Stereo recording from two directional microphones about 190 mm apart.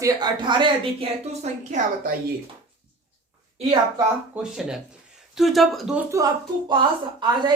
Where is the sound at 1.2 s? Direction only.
35° right (ahead or behind).